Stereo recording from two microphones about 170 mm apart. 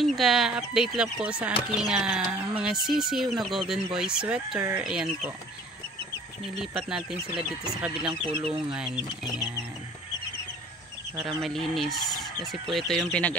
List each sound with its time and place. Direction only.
0.0 s speech: centre (ahead or behind)
6.6 s speech: 5° right (ahead or behind)
8.1 s speech: 30° right (ahead or behind)
8.7 s speech: 5° right (ahead or behind)
11.2 s speech: centre (ahead or behind)